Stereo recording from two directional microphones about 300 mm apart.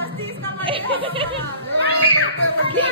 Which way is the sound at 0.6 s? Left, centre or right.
Centre.